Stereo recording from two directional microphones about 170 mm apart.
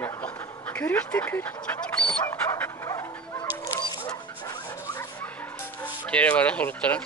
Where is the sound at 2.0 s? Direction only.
10° left (ahead or behind).